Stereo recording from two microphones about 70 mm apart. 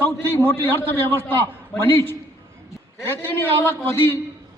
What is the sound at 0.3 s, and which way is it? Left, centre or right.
Speech, left.